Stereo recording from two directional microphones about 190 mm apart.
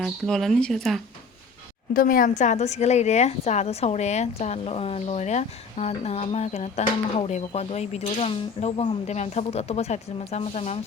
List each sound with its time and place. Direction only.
0.0 s speech: centre (ahead or behind)
1.9 s a woman's voice: 50° left (ahead or behind)